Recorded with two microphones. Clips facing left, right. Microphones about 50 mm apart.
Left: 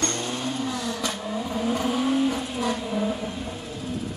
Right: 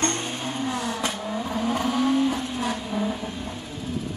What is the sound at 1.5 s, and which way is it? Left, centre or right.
Vehicle, right.